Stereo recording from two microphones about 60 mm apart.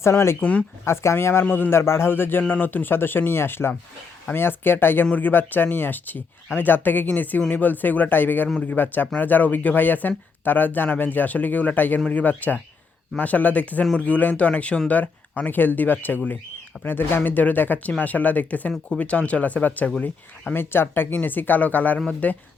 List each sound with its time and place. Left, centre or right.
0.0 s speech: left
0.3 s speech: left
0.9 s speech: left
1.5 s speech: left
1.7 s speech: left
20.5 s speech: left